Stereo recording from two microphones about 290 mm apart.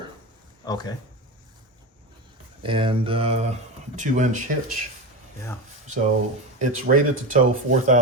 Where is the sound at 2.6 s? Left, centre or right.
Centre.